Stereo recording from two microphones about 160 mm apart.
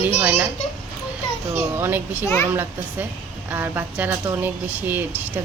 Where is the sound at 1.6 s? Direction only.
15° right (ahead or behind).